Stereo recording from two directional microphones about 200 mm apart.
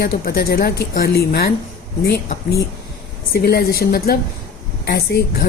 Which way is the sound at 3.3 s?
50° left (ahead or behind).